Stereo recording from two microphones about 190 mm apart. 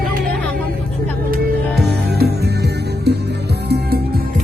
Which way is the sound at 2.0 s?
60° right (ahead or behind).